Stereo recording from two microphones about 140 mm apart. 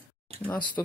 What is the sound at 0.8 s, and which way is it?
Speech, 15° left (ahead or behind).